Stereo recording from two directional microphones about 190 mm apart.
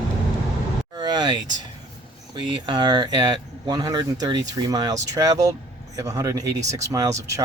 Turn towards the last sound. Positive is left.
turn(degrees=-15)  # may be behind; listen again after turning